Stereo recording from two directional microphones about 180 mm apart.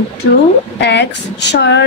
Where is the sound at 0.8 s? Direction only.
75° left (ahead or behind).